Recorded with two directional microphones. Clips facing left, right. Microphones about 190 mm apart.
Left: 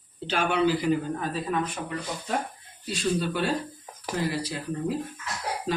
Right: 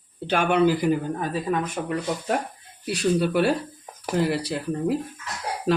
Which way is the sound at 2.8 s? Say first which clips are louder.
Right 5 dB; 65° right (ahead or behind).